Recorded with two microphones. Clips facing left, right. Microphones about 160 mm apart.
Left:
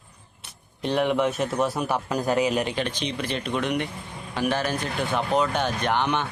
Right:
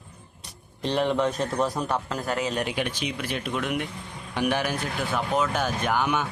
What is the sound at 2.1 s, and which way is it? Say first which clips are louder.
Speech: left 5 dB; 20° left (ahead or behind).